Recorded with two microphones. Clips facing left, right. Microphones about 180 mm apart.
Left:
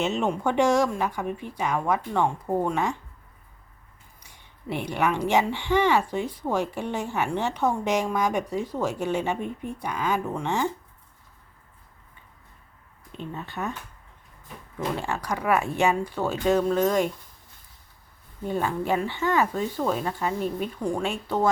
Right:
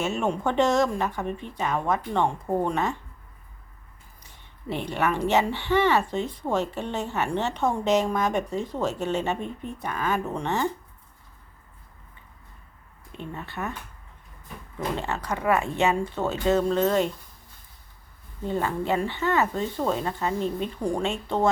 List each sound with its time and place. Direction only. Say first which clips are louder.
0.0 s speech: left 1 dB; 20° left (ahead or behind)
4.2 s speech: right 1 dB; 10° left (ahead or behind)
13.3 s speech: left 1 dB; 15° left (ahead or behind)
14.9 s speech: even; 10° left (ahead or behind)
18.4 s speech: even; 15° left (ahead or behind)